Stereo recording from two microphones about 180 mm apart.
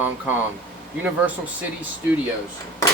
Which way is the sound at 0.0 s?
10° right (ahead or behind).